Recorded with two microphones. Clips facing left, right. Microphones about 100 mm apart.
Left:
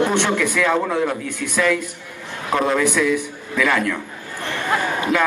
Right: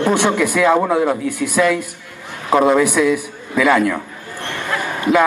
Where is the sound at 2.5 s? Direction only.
25° right (ahead or behind).